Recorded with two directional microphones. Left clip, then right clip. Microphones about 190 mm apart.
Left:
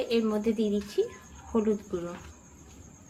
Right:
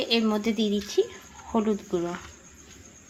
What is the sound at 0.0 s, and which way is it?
A woman's voice, 35° right (ahead or behind).